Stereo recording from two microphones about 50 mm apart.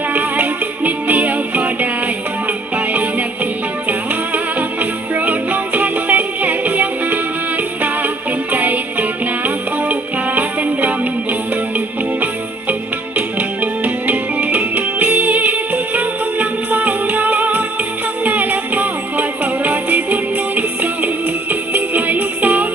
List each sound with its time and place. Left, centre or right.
0.1 s music: right
4.8 s music: right
8.5 s music: right
13.1 s music: right